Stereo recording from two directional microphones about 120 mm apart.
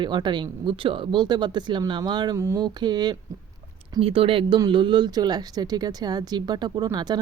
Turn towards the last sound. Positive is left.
turn(degrees=-35)  # may be behind; listen again after turning